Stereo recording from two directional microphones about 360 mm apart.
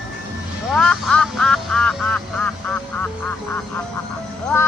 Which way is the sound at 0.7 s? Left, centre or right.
Centre.